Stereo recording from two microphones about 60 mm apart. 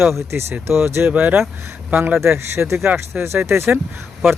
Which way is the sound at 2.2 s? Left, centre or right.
Right.